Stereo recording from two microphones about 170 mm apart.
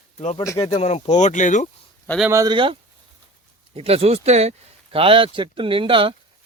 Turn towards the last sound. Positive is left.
turn(degrees=-30)  # may be behind; listen again after turning